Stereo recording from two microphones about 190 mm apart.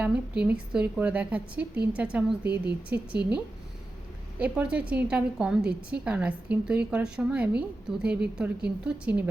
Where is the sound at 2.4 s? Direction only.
60° right (ahead or behind).